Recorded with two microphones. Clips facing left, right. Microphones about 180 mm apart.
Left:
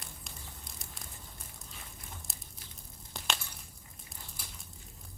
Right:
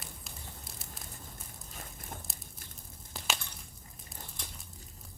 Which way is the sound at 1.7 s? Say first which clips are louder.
Right 6 dB; 45° right (ahead or behind).